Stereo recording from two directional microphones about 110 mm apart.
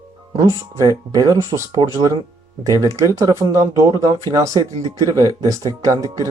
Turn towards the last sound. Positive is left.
turn(degrees=-30)  # may be behind; listen again after turning